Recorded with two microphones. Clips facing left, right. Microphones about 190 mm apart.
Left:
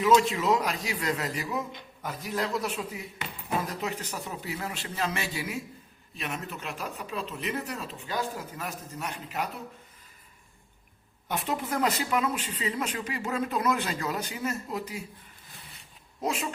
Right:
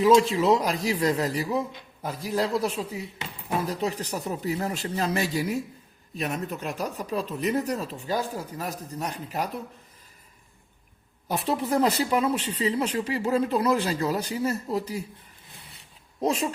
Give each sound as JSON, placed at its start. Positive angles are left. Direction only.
{"t": 0.0, "sound": "speech", "side_deg": -30}
{"t": 11.3, "sound": "speech", "side_deg": -35}
{"t": 16.2, "sound": "speech", "side_deg": -35}